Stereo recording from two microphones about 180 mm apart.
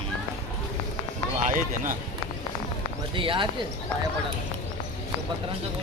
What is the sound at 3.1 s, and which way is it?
Speech, 30° right (ahead or behind).